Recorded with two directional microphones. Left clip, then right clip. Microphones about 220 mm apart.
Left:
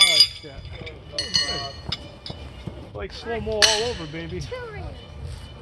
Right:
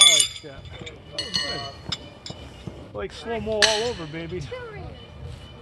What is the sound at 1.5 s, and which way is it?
Music, 35° right (ahead or behind).